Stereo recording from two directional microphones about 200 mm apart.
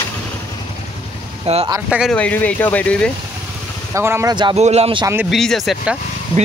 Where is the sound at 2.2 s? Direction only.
5° left (ahead or behind).